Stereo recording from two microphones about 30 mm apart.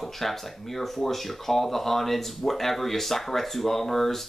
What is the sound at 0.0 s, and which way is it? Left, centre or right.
Speech, centre.